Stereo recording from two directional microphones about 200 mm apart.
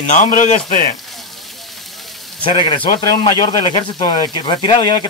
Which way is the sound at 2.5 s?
25° left (ahead or behind).